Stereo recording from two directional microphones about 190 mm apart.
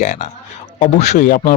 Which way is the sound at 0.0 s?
40° left (ahead or behind).